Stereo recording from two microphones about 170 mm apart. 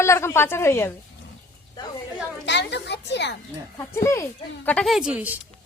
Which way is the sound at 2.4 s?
90° left.